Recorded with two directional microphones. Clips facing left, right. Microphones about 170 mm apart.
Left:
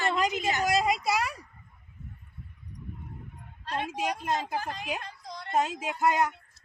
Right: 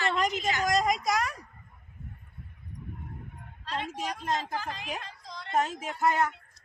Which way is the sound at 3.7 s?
55° left (ahead or behind).